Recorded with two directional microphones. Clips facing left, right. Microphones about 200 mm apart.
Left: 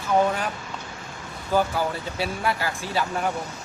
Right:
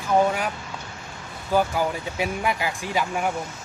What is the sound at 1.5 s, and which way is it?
Speech, 15° right (ahead or behind).